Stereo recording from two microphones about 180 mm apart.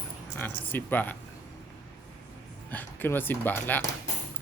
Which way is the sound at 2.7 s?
10° left (ahead or behind).